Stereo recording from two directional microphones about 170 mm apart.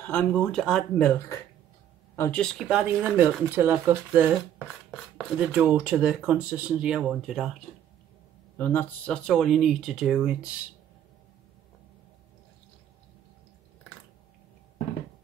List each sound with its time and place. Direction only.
0.0 s speech: 10° left (ahead or behind)
2.4 s speech: 5° right (ahead or behind)
8.5 s speech: 10° left (ahead or behind); by 10.5 s 5° right (ahead or behind)